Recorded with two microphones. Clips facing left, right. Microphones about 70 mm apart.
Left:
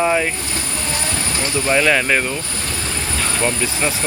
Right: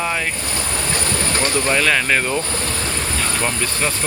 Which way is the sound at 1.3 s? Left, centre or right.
Right.